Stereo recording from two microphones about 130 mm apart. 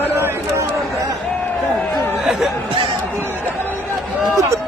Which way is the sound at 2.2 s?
Centre (ahead or behind).